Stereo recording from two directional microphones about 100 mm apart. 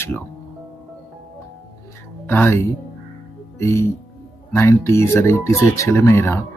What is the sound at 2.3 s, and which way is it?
Speech, 20° left (ahead or behind).